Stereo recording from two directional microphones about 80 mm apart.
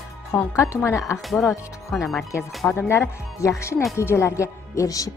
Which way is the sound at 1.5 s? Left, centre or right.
Left.